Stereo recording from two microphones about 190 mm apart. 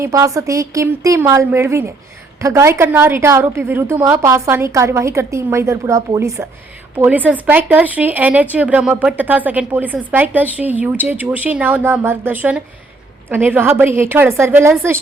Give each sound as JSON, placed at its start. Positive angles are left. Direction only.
{"t": 0.0, "sound": "speech", "side_deg": -15}